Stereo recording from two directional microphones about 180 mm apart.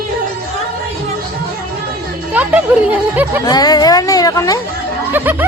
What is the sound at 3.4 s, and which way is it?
Speech, 20° left (ahead or behind).